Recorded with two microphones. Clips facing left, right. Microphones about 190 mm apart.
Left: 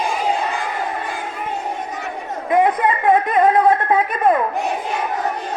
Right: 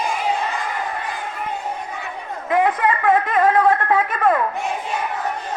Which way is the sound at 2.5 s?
20° left (ahead or behind).